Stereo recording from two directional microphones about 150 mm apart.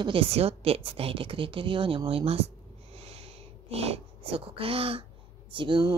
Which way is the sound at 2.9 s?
45° right (ahead or behind).